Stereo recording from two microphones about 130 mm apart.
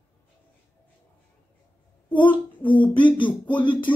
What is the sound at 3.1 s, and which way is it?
Speech, 40° left (ahead or behind).